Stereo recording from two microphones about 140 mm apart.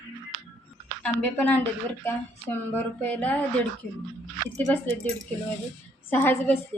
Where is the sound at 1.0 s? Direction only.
10° left (ahead or behind).